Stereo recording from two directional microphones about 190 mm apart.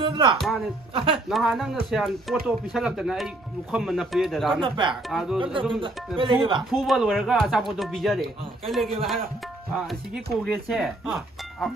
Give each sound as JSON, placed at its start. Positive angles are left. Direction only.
{"t": 0.4, "sound": "speech", "side_deg": 0}
{"t": 0.9, "sound": "speech", "side_deg": -25}
{"t": 1.3, "sound": "speech", "side_deg": 0}
{"t": 4.6, "sound": "speech", "side_deg": -25}
{"t": 5.1, "sound": "speech", "side_deg": 0}
{"t": 5.4, "sound": "speech", "side_deg": -25}
{"t": 6.7, "sound": "speech", "side_deg": 0}
{"t": 9.7, "sound": "tabla", "side_deg": 0}
{"t": 10.4, "sound": "speech", "side_deg": 0}